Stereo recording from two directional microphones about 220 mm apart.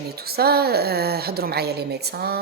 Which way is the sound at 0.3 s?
45° right (ahead or behind).